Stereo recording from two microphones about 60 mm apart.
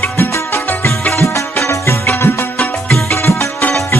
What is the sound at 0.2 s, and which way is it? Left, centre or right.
Music, left.